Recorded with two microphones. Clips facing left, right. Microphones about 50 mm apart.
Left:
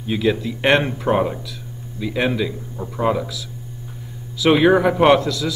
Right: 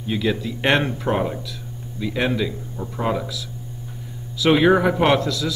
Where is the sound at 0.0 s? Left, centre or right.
Centre.